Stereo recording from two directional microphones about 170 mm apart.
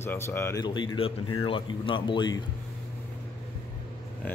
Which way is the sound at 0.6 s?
30° left (ahead or behind).